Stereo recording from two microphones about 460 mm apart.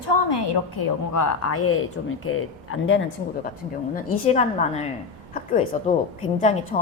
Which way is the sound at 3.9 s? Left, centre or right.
Centre.